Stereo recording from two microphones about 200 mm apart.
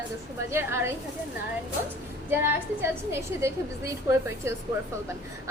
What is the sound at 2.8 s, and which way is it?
A woman's voice, 15° right (ahead or behind).